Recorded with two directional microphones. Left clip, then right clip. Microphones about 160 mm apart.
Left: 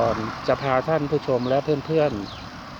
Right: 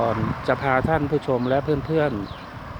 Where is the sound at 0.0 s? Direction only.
10° right (ahead or behind).